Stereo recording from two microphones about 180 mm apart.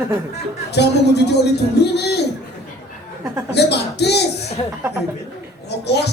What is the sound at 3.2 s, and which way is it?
Speech, 15° right (ahead or behind).